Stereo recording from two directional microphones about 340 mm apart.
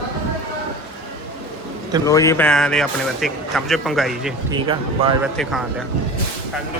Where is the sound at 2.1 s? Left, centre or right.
Centre.